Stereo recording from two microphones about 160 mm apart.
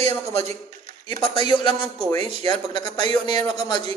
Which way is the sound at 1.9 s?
40° right (ahead or behind).